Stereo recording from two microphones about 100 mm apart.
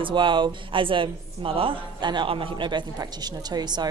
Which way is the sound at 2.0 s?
50° right (ahead or behind).